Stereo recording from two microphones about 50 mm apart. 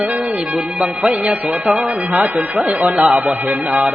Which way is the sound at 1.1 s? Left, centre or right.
Right.